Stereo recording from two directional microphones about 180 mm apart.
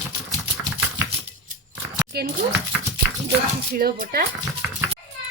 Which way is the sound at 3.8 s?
55° right (ahead or behind).